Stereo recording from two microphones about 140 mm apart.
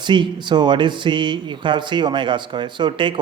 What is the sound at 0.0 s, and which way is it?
Speech, 35° right (ahead or behind).